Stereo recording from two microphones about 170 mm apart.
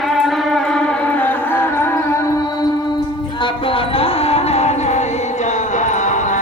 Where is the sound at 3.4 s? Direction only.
30° left (ahead or behind).